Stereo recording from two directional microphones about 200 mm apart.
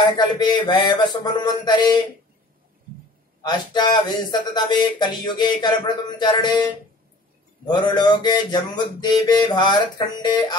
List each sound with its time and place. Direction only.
0.2 s speech: 20° left (ahead or behind)
3.4 s speech: 20° left (ahead or behind)
7.6 s speech: 20° left (ahead or behind)